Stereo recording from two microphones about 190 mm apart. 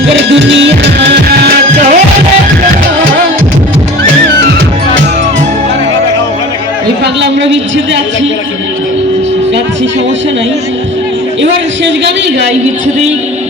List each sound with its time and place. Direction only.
0.2 s music: 70° right (ahead or behind); by 2.0 s 55° right (ahead or behind)
7.0 s a sound: 70° right (ahead or behind)
11.9 s a man's voice: 70° right (ahead or behind)